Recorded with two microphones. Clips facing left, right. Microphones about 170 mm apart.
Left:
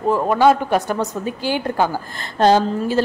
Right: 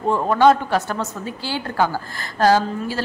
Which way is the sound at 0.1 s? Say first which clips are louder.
Even; 10° left (ahead or behind).